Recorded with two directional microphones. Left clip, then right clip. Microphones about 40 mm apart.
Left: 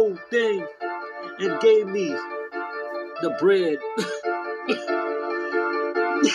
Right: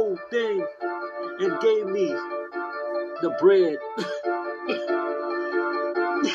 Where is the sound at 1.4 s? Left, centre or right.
Centre.